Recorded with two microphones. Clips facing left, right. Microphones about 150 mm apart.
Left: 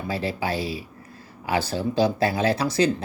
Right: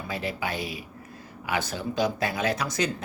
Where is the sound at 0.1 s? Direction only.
30° left (ahead or behind).